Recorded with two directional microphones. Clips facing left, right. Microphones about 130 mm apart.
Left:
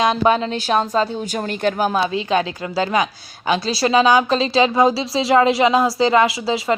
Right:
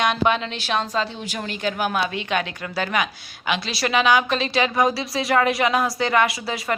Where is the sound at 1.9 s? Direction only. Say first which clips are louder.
Left 5 dB; 30° left (ahead or behind).